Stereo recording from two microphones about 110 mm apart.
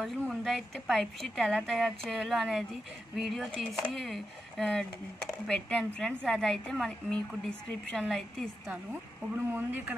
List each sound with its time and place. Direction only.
0.3 s speech: centre (ahead or behind)
9.3 s speech: 20° right (ahead or behind)